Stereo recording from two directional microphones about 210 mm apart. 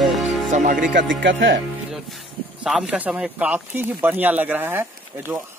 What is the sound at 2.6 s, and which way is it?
Speech, 5° right (ahead or behind).